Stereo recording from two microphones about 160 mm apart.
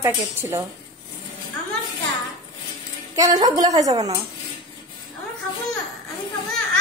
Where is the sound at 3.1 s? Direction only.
25° right (ahead or behind).